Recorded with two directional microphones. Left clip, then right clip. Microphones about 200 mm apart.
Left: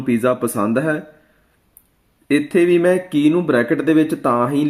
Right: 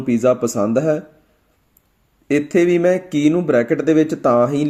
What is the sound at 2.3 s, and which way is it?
Speech, 25° right (ahead or behind).